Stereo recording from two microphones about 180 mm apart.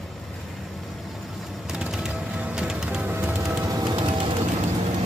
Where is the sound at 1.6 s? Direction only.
5° right (ahead or behind); by 3.9 s 20° right (ahead or behind).